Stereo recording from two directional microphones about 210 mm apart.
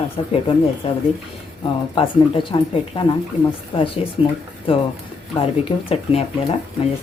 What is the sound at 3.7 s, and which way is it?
A woman's voice, 25° left (ahead or behind).